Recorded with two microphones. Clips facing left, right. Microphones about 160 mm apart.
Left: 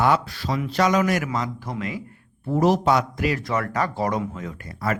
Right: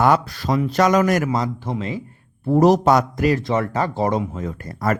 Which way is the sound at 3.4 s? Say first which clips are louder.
Right 3 dB; 25° right (ahead or behind).